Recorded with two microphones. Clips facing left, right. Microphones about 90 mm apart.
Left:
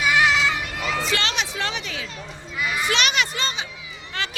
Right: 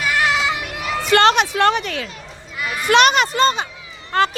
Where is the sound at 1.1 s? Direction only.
50° right (ahead or behind).